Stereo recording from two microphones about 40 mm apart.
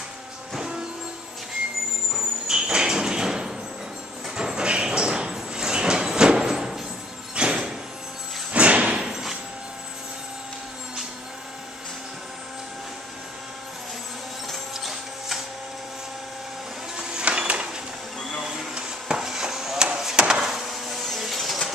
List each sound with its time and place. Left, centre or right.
0.6 s vehicle: centre
2.4 s sliding door: centre
4.4 s a sound: centre
8.5 s slam: right
14.5 s printer: centre
16.9 s printer: centre
17.2 s music: right
18.4 s printer: centre
18.8 s a sound: centre
19.8 s chop: centre
20.4 s a sound: centre
21.1 s printer: centre